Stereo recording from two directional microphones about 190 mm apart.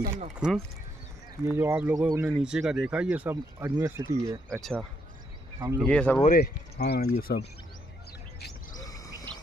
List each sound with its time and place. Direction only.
0.4 s speech: 5° right (ahead or behind)
4.5 s speech: centre (ahead or behind)
5.8 s speech: 5° left (ahead or behind)
6.2 s speech: 55° left (ahead or behind)
8.7 s bird: 20° left (ahead or behind)